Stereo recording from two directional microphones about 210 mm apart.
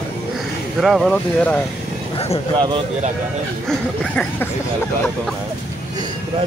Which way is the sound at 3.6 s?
5° left (ahead or behind).